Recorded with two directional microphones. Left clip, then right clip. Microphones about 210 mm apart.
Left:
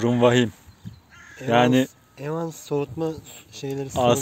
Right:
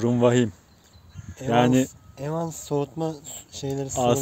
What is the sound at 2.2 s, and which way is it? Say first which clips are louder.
Speech: even; 55° right (ahead or behind).